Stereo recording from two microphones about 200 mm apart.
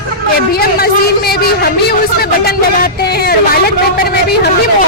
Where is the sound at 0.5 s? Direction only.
50° left (ahead or behind).